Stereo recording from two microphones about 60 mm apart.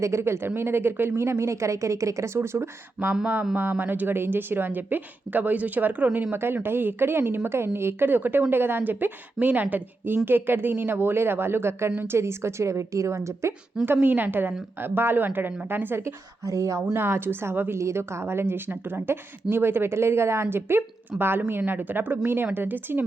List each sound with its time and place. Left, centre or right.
0.0 s a woman's voice: right
13.8 s a woman's voice: right
16.5 s speech: right
16.9 s a woman's voice: right
17.7 s a woman's voice: right